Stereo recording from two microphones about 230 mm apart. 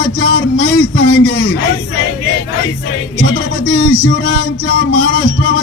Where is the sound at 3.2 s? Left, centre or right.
Left.